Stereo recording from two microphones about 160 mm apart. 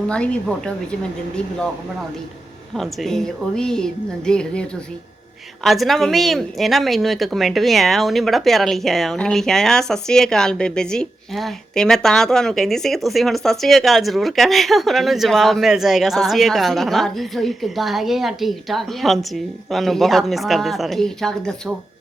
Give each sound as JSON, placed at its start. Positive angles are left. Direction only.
{"t": 0.1, "sound": "speech", "side_deg": 5}
{"t": 2.7, "sound": "speech", "side_deg": 0}
{"t": 5.6, "sound": "speech", "side_deg": 0}